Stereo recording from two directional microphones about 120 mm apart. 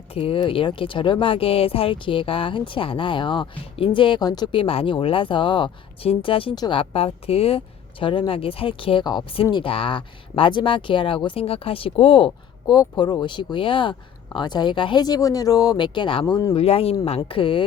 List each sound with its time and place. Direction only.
0.1 s speech: 50° left (ahead or behind); by 4.6 s 35° left (ahead or behind)
4.6 s speech: 50° left (ahead or behind)
12.7 s speech: 35° left (ahead or behind)
16.2 s speech: 30° left (ahead or behind)
16.6 s speech: 55° left (ahead or behind)